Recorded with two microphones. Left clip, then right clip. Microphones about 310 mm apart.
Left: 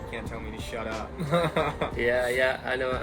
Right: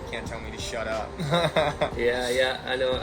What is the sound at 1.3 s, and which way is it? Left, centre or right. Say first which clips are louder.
Speech: right 2 dB; centre.